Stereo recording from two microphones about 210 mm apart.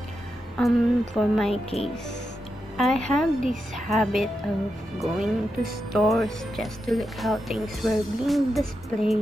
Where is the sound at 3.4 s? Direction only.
35° right (ahead or behind).